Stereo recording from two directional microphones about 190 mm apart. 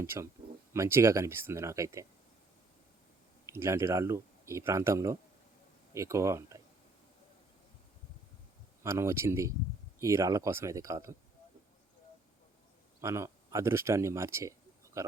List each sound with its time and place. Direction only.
0.0 s speech: 15° right (ahead or behind)
3.4 s speech: 15° right (ahead or behind)
8.8 s speech: 15° right (ahead or behind)
13.0 s a man's voice: 15° right (ahead or behind)